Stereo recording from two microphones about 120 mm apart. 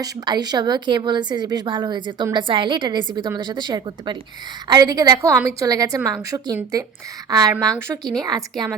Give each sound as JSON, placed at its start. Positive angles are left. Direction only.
{"t": 0.0, "sound": "a woman's voice", "side_deg": -35}
{"t": 3.0, "sound": "a woman's voice", "side_deg": 35}
{"t": 3.2, "sound": "a woman's voice", "side_deg": -40}
{"t": 7.7, "sound": "speech", "side_deg": 5}
{"t": 8.2, "sound": "a woman's voice", "side_deg": -30}